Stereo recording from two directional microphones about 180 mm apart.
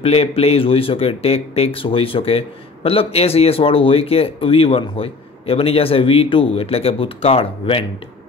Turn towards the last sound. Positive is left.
turn(degrees=30)  # may be behind; listen again after turning